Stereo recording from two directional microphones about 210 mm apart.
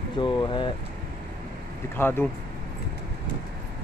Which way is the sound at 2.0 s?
10° left (ahead or behind).